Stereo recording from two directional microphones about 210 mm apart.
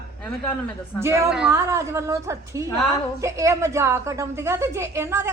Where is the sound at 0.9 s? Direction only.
10° right (ahead or behind).